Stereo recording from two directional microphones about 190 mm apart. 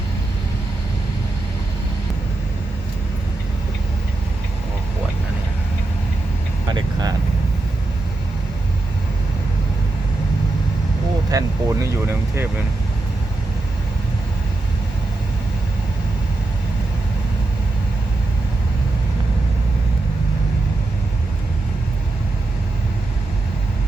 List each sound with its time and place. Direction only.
6.7 s vehicle: 20° right (ahead or behind)
11.3 s speech: 15° right (ahead or behind)